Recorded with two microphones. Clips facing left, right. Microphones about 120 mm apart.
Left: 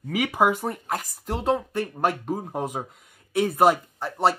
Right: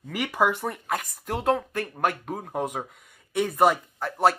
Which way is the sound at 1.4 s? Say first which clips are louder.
Even; 25° left (ahead or behind).